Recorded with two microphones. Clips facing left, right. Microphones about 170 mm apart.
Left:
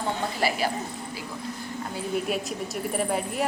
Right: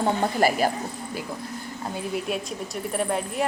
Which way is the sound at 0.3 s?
45° right (ahead or behind).